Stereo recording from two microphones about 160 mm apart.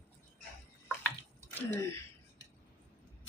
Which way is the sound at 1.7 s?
15° left (ahead or behind).